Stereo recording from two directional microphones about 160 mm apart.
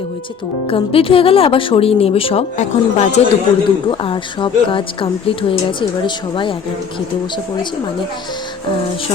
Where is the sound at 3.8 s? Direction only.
35° left (ahead or behind).